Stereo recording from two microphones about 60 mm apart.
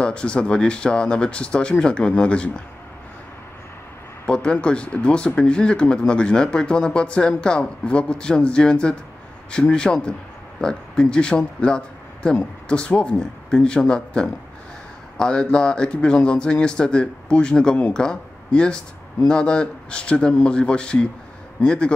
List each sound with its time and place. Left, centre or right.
0.0 s speech: centre
4.3 s a man's voice: centre